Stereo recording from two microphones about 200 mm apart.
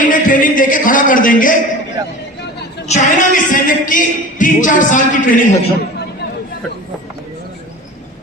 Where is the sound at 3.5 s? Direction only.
40° left (ahead or behind).